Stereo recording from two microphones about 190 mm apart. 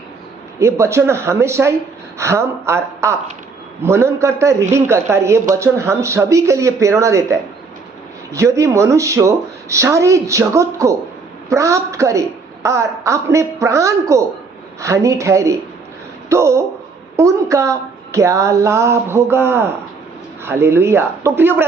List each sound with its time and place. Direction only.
0.6 s speech: 15° right (ahead or behind)